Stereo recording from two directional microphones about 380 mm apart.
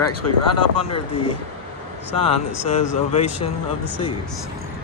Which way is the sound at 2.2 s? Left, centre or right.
Centre.